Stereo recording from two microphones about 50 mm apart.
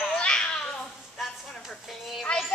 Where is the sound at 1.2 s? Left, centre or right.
Centre.